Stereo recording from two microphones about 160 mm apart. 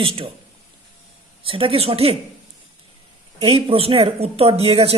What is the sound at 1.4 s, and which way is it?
Speech, 35° right (ahead or behind).